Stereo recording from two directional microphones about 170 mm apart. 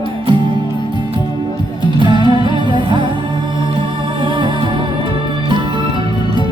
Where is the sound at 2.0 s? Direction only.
30° right (ahead or behind).